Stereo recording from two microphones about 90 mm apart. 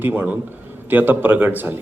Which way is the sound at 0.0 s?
20° right (ahead or behind).